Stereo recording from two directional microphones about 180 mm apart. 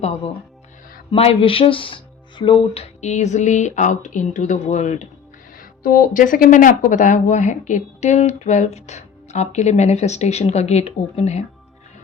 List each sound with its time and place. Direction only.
1.1 s speech: 30° left (ahead or behind)